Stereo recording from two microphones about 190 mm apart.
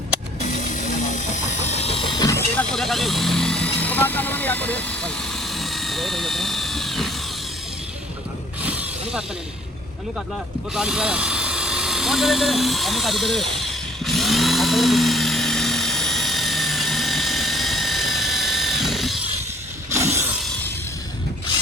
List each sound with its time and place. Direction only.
0.4 s vehicle: 40° left (ahead or behind); by 2.4 s 20° left (ahead or behind)
2.6 s vehicle: centre (ahead or behind)
8.6 s snake: 10° right (ahead or behind)
10.8 s drill: 5° right (ahead or behind)